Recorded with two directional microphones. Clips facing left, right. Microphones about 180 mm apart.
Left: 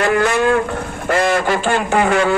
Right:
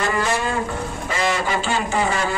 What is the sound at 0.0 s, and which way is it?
Speech, 65° left (ahead or behind).